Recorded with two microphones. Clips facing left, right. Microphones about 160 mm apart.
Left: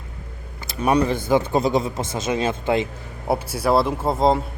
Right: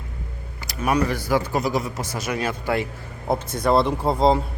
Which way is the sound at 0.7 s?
30° left (ahead or behind).